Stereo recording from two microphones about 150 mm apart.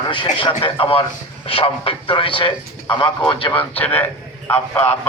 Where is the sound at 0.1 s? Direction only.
35° left (ahead or behind).